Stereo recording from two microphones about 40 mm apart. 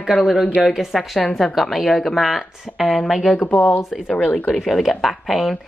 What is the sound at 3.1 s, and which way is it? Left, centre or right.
Speech, centre.